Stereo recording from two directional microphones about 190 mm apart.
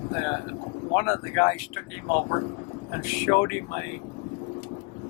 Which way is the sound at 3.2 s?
15° left (ahead or behind).